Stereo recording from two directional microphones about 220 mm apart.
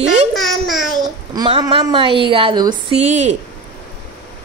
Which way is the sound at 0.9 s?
20° right (ahead or behind).